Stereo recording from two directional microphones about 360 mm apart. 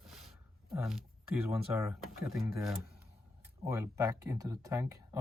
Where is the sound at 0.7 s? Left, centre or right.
Centre.